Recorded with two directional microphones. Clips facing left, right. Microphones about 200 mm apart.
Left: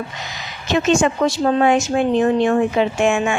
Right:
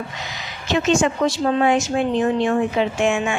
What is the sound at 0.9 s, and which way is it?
A woman's voice, 50° left (ahead or behind).